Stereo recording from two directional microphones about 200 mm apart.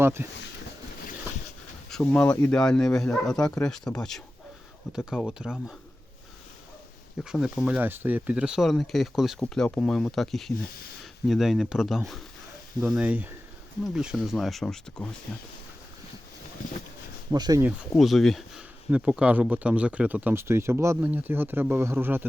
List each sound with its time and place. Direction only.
0.0 s speech: 10° right (ahead or behind)
1.9 s speech: 5° left (ahead or behind)
7.3 s speech: 5° right (ahead or behind)
17.3 s speech: 20° right (ahead or behind)
17.7 s speech: centre (ahead or behind)